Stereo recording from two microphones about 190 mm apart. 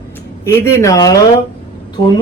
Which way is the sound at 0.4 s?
15° left (ahead or behind).